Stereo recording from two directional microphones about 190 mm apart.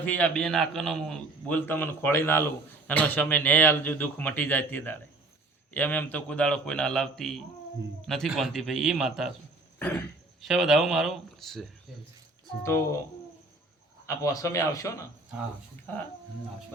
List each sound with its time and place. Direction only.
0.0 s a man's voice: 10° left (ahead or behind)
9.7 s cough: 10° left (ahead or behind)
10.4 s a man's voice: centre (ahead or behind)
12.6 s a man's voice: 15° left (ahead or behind)
14.2 s a man's voice: 15° left (ahead or behind)